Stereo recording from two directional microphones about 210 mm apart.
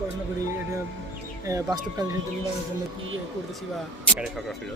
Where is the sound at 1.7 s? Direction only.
20° right (ahead or behind).